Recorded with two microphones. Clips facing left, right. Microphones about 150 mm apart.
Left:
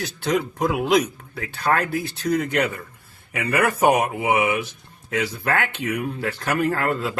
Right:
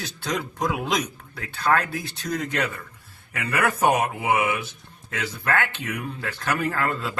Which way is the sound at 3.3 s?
10° left (ahead or behind).